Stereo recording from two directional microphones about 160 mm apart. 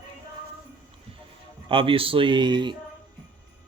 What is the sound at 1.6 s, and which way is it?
A man's voice, 35° right (ahead or behind).